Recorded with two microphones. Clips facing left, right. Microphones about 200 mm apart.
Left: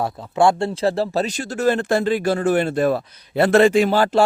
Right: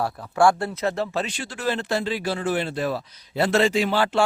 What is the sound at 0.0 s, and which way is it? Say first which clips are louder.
Speech: left 2 dB; 20° left (ahead or behind).